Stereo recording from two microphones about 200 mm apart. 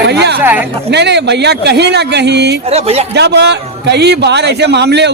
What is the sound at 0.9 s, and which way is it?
A man's voice, 60° right (ahead or behind).